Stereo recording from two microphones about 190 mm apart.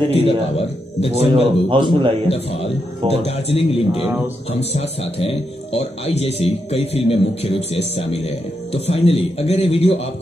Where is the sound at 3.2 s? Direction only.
30° left (ahead or behind).